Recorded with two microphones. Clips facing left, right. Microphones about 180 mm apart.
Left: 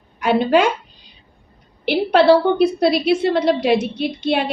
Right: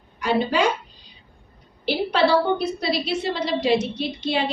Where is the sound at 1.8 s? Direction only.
60° left (ahead or behind).